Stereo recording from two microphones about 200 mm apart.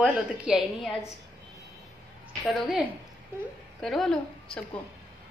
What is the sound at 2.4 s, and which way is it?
A woman's voice, centre (ahead or behind).